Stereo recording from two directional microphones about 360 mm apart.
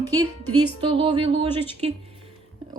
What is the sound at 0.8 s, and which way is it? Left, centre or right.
Speech, centre.